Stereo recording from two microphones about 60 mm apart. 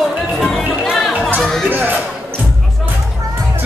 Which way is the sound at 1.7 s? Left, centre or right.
Right.